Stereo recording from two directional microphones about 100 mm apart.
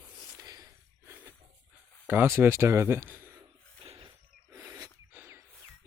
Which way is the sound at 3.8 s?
65° right (ahead or behind).